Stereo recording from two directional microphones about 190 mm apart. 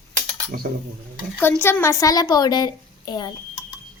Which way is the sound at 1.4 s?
10° left (ahead or behind).